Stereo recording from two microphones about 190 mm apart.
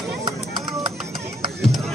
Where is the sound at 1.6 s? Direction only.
Centre (ahead or behind).